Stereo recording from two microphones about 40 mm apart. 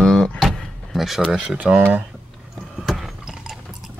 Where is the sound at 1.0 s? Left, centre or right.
Centre.